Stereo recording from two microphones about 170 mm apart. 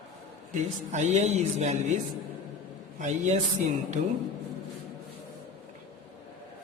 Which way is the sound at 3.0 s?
45° right (ahead or behind).